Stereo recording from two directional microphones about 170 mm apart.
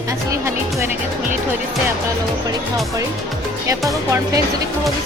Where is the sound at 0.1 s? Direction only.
15° right (ahead or behind).